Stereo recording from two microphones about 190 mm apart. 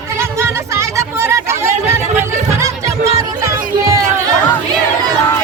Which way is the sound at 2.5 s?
15° right (ahead or behind).